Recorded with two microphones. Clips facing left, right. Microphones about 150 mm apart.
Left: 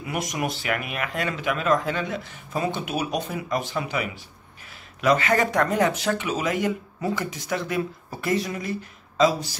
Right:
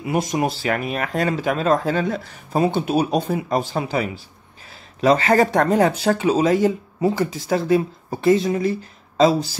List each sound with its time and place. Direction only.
0.0 s speech: 30° right (ahead or behind)